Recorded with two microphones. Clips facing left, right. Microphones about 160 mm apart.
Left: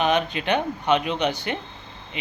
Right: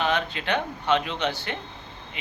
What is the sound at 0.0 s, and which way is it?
Speech, 20° left (ahead or behind).